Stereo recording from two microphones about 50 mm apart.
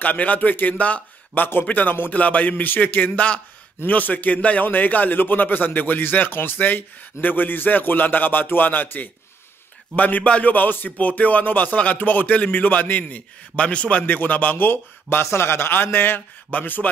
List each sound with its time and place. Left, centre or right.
0.0 s speech: left
1.4 s speech: left
13.6 s a man's voice: left
14.0 s speech: left
14.7 s a man's voice: left
15.2 s a man's voice: left